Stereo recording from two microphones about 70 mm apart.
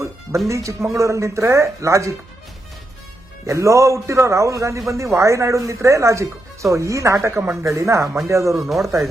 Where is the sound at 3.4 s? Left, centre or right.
Right.